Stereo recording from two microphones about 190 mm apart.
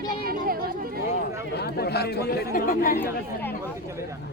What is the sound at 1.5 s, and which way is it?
Speech, 60° left (ahead or behind).